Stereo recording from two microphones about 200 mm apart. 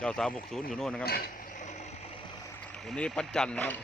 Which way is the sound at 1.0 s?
50° left (ahead or behind).